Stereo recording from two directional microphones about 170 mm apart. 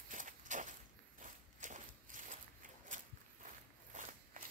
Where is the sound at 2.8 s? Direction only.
50° right (ahead or behind).